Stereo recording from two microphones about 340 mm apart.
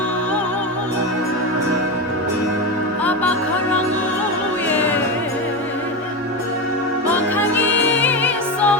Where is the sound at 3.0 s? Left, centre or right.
Centre.